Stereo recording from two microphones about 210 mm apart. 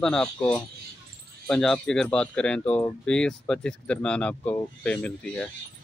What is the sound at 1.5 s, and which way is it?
Speech, 5° left (ahead or behind).